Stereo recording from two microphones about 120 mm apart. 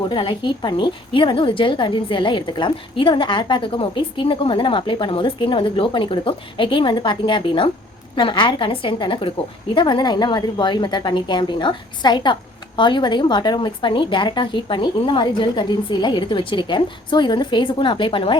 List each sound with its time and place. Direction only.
0.1 s a woman's voice: 40° left (ahead or behind)